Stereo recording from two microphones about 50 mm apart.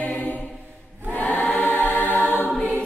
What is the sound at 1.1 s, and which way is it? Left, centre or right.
Choir, left.